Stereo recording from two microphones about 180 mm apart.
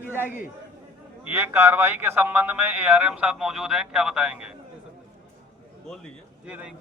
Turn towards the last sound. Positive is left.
turn(degrees=-5)  # may be behind; listen again after turning